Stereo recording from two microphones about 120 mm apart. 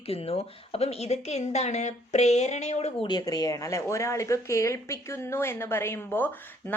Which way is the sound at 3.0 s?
35° left (ahead or behind).